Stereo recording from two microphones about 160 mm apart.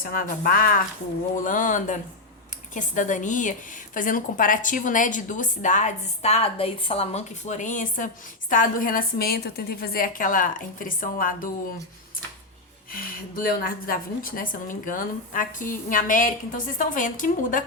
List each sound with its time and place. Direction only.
0.0 s a woman's voice: 60° left (ahead or behind)
12.9 s a woman's voice: 65° left (ahead or behind)